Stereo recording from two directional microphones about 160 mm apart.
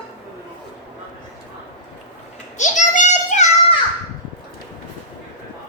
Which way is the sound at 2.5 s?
50° left (ahead or behind).